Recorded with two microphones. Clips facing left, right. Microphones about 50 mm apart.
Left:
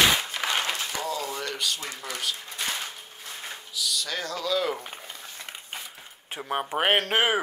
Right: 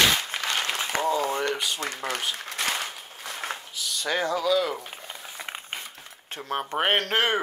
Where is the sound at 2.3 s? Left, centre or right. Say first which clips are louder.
Right 3 dB; right.